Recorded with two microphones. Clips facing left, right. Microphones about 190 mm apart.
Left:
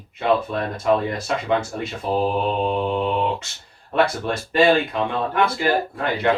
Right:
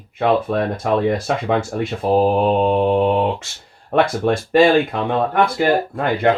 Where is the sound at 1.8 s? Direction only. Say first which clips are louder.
Right 6 dB; 50° right (ahead or behind).